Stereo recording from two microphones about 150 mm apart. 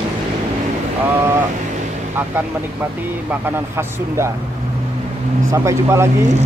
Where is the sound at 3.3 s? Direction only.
15° right (ahead or behind).